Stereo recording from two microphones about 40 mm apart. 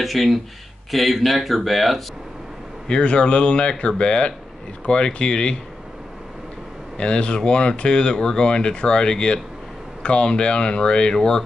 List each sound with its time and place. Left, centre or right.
0.0 s speech: centre
2.9 s speech: left
7.0 s speech: left